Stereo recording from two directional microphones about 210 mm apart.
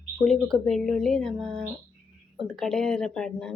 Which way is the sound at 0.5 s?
Centre (ahead or behind).